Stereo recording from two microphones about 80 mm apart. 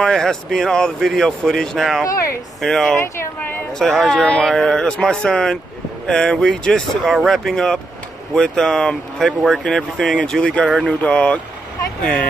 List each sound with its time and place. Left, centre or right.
0.0 s speech: centre
2.0 s speech: left
2.6 s speech: centre
3.3 s a sound: left
3.7 s speech: centre